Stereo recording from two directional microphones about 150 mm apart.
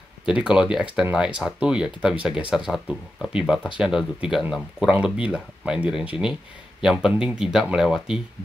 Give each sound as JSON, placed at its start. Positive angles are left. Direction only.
{"t": 0.3, "sound": "speech", "side_deg": -5}